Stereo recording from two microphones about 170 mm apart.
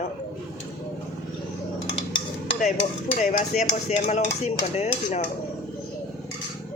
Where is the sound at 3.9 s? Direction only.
40° left (ahead or behind).